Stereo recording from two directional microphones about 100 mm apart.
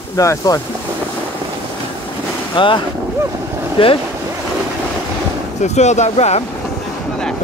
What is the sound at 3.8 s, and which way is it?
Speech, 65° left (ahead or behind).